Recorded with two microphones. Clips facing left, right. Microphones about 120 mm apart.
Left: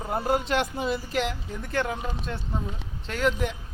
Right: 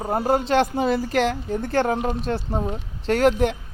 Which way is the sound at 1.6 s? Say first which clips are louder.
Right 7 dB; 35° right (ahead or behind).